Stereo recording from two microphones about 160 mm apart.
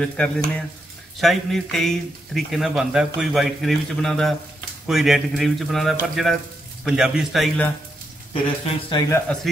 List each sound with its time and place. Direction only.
0.0 s speech: 5° left (ahead or behind)
8.3 s speech: 40° left (ahead or behind)
9.3 s speech: 10° left (ahead or behind)